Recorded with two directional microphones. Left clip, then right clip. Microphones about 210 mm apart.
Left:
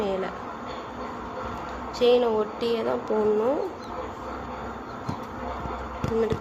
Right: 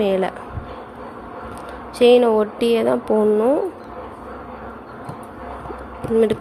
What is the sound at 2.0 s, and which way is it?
A woman's voice, 40° right (ahead or behind).